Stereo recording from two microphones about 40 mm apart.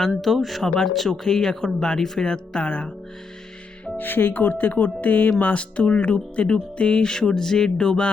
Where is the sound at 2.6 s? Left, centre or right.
Left.